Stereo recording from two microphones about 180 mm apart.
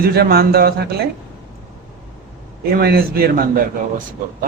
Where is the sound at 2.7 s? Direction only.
55° right (ahead or behind).